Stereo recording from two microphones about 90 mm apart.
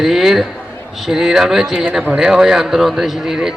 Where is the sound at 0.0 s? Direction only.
Centre (ahead or behind).